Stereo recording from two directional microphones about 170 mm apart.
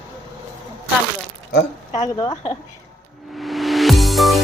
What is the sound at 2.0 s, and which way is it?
Speech, 25° left (ahead or behind).